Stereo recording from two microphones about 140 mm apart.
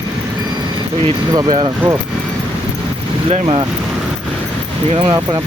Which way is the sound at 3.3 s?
40° right (ahead or behind).